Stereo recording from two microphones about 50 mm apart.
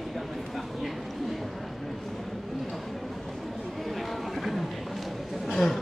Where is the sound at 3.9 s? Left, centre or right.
Centre.